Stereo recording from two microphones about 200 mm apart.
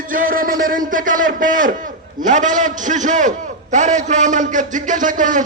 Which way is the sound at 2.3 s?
40° right (ahead or behind).